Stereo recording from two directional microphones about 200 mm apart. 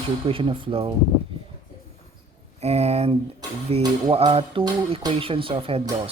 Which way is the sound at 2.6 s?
30° right (ahead or behind).